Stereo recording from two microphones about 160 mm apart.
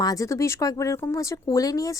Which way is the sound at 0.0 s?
20° left (ahead or behind).